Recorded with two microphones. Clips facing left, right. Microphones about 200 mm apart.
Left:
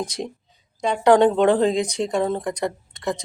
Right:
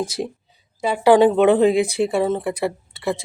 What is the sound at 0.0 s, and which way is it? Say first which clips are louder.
A woman's voice: right 3 dB; 5° right (ahead or behind).